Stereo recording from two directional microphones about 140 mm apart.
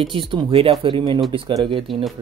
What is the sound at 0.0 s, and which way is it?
Speech, 40° right (ahead or behind).